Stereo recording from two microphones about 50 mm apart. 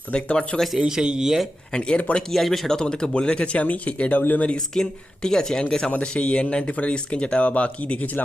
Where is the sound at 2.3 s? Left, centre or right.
Centre; by 4.5 s left.